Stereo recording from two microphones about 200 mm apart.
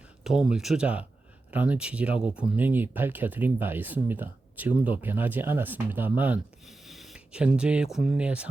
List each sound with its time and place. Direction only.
0.3 s speech: 5° right (ahead or behind)